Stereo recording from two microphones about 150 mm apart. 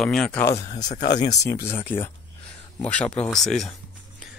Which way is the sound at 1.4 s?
20° left (ahead or behind).